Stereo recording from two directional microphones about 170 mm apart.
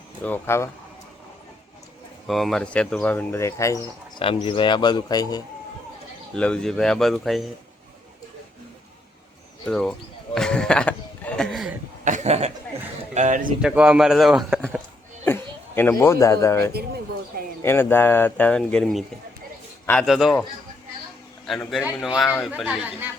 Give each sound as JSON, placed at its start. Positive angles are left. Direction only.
{"t": 0.3, "sound": "speech", "side_deg": 15}
{"t": 2.2, "sound": "speech", "side_deg": 0}
{"t": 4.2, "sound": "speech", "side_deg": 30}
{"t": 6.3, "sound": "speech", "side_deg": 5}
{"t": 9.6, "sound": "speech", "side_deg": 5}
{"t": 10.3, "sound": "a sound", "side_deg": 5}
{"t": 12.0, "sound": "chuckle", "side_deg": -45}
{"t": 13.1, "sound": "speech", "side_deg": -50}
{"t": 13.6, "sound": "speech", "side_deg": -5}
{"t": 15.2, "sound": "speech", "side_deg": 15}
{"t": 21.4, "sound": "a man's voice", "side_deg": 0}